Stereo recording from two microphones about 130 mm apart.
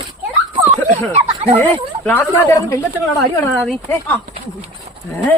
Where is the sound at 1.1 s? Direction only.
50° right (ahead or behind).